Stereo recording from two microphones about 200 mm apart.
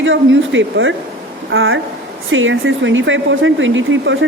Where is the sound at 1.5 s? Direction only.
80° right.